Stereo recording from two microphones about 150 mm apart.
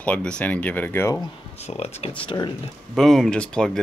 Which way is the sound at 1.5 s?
45° left (ahead or behind).